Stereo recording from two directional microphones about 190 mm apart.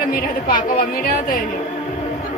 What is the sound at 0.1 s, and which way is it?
Speech, 50° left (ahead or behind).